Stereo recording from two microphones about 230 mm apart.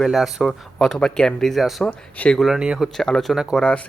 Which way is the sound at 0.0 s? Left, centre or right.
Centre.